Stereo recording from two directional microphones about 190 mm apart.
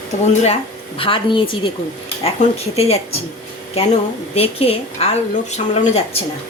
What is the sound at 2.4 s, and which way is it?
Speech, 40° left (ahead or behind).